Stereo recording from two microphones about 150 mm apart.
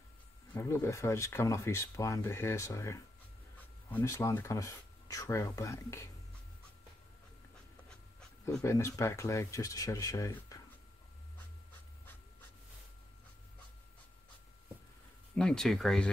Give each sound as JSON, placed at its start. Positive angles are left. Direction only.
{"t": 0.6, "sound": "speech", "side_deg": 20}
{"t": 8.6, "sound": "speech", "side_deg": 20}
{"t": 15.3, "sound": "speech", "side_deg": 5}